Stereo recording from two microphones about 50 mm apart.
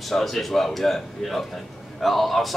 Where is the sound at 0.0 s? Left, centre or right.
Centre.